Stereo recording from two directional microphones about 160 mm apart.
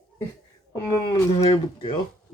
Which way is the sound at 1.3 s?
35° left (ahead or behind).